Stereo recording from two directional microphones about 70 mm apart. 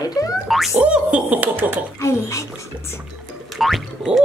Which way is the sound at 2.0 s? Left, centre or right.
Left.